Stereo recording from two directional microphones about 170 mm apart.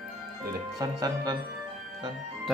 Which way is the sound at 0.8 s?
20° right (ahead or behind).